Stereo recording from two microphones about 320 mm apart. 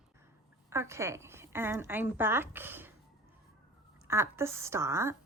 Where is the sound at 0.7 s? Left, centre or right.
Centre.